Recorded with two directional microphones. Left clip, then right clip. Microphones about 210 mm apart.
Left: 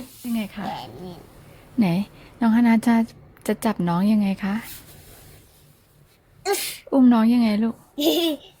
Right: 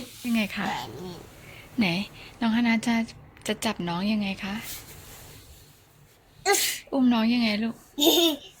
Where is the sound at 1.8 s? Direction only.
40° left (ahead or behind).